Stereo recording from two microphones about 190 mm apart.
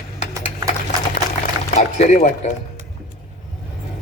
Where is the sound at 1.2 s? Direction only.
55° left (ahead or behind).